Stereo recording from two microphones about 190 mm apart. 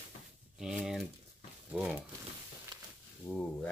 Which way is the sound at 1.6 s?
5° right (ahead or behind).